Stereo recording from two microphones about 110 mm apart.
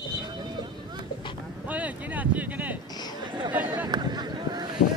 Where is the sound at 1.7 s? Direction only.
15° right (ahead or behind).